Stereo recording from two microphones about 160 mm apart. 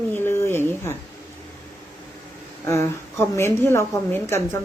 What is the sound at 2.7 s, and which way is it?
Speech, 15° left (ahead or behind).